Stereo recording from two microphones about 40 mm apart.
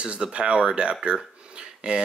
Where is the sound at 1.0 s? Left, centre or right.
Right.